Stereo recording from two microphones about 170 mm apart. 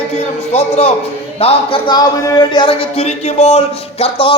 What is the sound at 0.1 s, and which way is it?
Speech, 40° left (ahead or behind).